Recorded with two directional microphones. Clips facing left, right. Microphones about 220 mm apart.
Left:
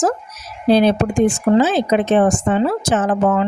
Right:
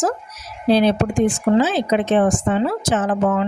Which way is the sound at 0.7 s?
50° left (ahead or behind).